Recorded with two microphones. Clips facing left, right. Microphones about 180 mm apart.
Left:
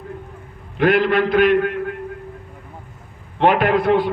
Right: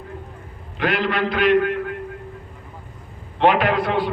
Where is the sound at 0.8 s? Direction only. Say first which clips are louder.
Left 6 dB; 50° left (ahead or behind).